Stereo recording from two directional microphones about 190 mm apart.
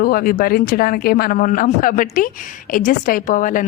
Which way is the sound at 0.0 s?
50° left (ahead or behind).